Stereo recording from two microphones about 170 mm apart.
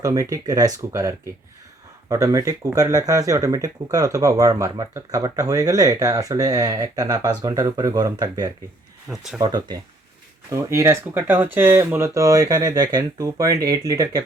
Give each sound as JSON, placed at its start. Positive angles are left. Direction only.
{"t": 0.0, "sound": "speech", "side_deg": -20}
{"t": 9.0, "sound": "speech", "side_deg": -5}
{"t": 9.4, "sound": "speech", "side_deg": -25}